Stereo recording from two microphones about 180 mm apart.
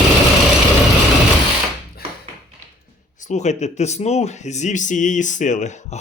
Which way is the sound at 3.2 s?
40° left (ahead or behind).